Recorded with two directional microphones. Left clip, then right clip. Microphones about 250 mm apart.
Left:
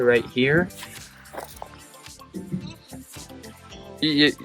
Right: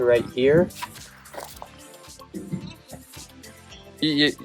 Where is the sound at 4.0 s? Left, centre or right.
Centre.